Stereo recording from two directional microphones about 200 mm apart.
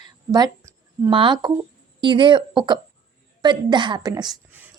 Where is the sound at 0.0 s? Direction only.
20° right (ahead or behind).